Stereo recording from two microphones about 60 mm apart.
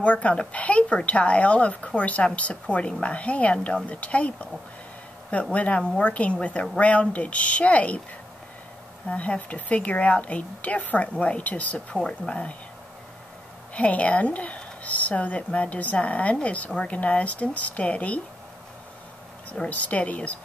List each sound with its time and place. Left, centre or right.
0.0 s speech: left
9.1 s speech: left
11.9 s speech: centre
13.7 s speech: left
19.5 s speech: left